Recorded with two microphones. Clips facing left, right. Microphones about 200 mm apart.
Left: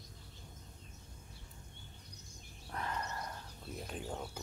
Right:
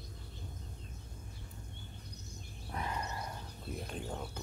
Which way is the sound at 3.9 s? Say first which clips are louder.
Left 1 dB; 5° left (ahead or behind).